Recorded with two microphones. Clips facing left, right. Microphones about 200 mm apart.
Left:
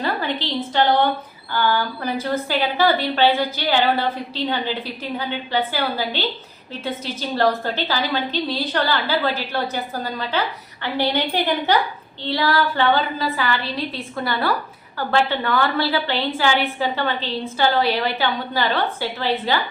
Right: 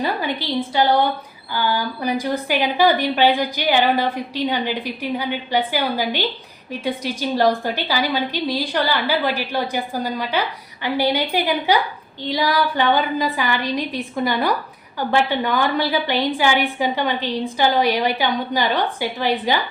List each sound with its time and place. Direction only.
0.0 s a woman's voice: 10° right (ahead or behind)